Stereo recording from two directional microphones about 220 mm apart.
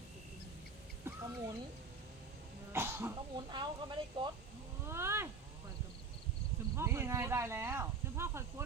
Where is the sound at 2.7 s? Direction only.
10° right (ahead or behind).